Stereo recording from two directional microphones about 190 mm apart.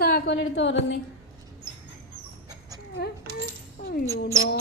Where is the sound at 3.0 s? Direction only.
55° left (ahead or behind).